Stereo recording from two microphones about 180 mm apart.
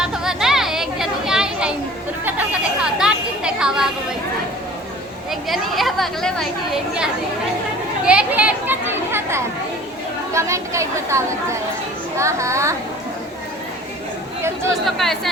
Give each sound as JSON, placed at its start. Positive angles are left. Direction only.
{"t": 0.0, "sound": "chatter", "side_deg": -5}
{"t": 3.0, "sound": "a sound", "side_deg": -5}
{"t": 5.3, "sound": "a child's voice", "side_deg": 0}
{"t": 14.8, "sound": "speech", "side_deg": 0}